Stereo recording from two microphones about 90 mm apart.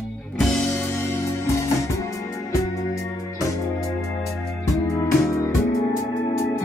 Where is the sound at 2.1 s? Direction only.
35° left (ahead or behind).